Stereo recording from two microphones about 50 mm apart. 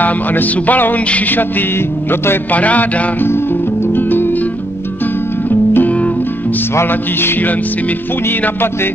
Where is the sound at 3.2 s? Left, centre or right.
Left.